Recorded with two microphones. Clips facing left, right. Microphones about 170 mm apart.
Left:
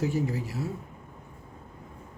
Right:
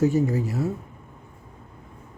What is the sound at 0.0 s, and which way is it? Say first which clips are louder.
Speech: right 7 dB; 45° right (ahead or behind).